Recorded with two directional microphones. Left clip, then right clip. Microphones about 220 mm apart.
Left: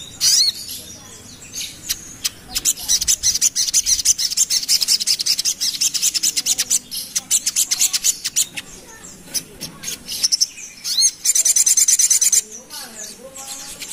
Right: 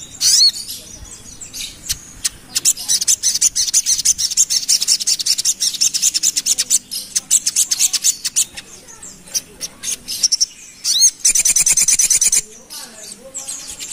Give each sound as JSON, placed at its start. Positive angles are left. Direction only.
{"t": 0.2, "sound": "bird", "side_deg": -25}
{"t": 1.9, "sound": "bird", "side_deg": -25}
{"t": 9.6, "sound": "mouse", "side_deg": -30}
{"t": 10.2, "sound": "chirp", "side_deg": -25}